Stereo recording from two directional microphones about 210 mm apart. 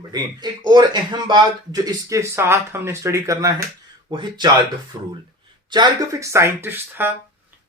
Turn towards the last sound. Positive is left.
turn(degrees=-10)  # may be behind; listen again after turning